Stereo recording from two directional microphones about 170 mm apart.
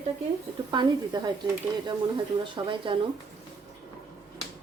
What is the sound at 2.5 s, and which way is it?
Speech, 30° right (ahead or behind).